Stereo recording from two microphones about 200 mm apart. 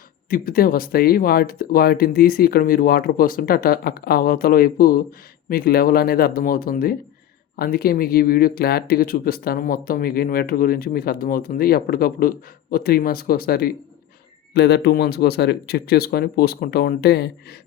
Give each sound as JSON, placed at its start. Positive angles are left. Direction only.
{"t": 0.3, "sound": "speech", "side_deg": 45}